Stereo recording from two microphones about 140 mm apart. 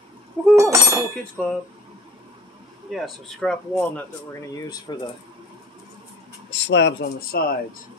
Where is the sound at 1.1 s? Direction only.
5° left (ahead or behind).